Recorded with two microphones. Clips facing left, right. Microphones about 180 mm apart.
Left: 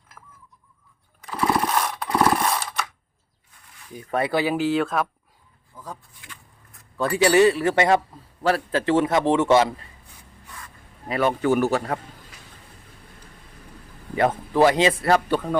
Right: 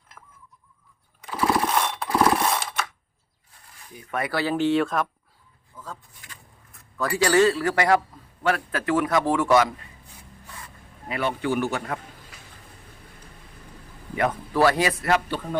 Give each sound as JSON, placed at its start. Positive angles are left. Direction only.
{"t": 0.2, "sound": "a sound", "side_deg": 5}
{"t": 1.2, "sound": "mechanisms", "side_deg": 0}
{"t": 4.1, "sound": "a man's voice", "side_deg": 30}
{"t": 4.4, "sound": "speech", "side_deg": 10}
{"t": 5.7, "sound": "vehicle", "side_deg": 15}
{"t": 7.2, "sound": "a man's voice", "side_deg": 20}
{"t": 11.1, "sound": "speech", "side_deg": 45}
{"t": 14.2, "sound": "a man's voice", "side_deg": 25}